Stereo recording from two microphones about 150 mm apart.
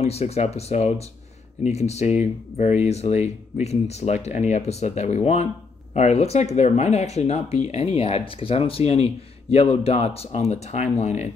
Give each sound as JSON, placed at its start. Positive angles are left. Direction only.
{"t": 0.0, "sound": "speech", "side_deg": 45}